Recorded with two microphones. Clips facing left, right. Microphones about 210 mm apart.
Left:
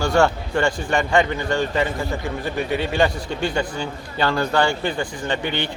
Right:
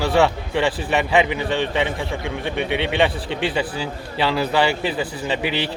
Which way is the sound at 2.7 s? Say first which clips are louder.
Even; 75° right (ahead or behind).